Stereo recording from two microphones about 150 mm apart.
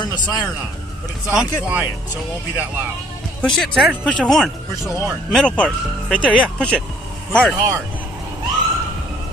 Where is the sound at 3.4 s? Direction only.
Centre (ahead or behind).